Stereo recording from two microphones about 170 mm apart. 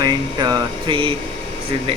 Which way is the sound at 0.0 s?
25° right (ahead or behind).